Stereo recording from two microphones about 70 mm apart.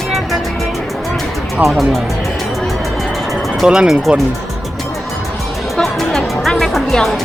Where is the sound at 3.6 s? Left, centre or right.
Centre.